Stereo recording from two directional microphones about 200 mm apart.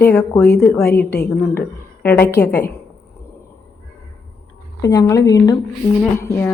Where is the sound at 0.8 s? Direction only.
50° left (ahead or behind).